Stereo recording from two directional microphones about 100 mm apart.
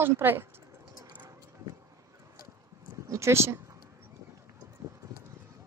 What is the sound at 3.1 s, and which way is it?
Speech, 30° right (ahead or behind).